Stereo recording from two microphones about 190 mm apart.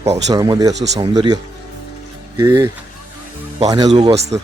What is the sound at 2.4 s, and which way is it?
Speech, 15° right (ahead or behind).